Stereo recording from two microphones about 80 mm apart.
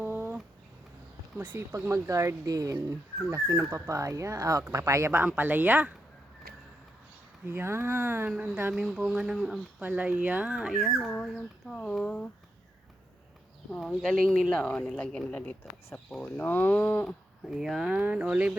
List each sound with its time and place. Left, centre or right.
0.0 s a sound: right
1.4 s speech: right
1.7 s speech: right
5.4 s speech: right
7.4 s speech: right
8.7 s speech: centre
9.8 s speech: centre
10.8 s speech: centre
13.7 s speech: centre
16.0 s speech: centre
16.4 s speech: left
17.4 s speech: centre